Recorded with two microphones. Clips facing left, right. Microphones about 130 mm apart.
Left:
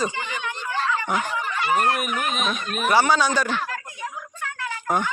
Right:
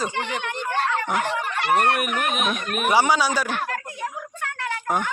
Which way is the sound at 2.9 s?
15° right (ahead or behind).